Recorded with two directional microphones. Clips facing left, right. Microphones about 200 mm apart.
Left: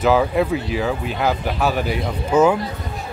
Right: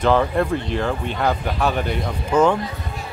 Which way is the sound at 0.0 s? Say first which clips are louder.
Left 1 dB; 5° left (ahead or behind).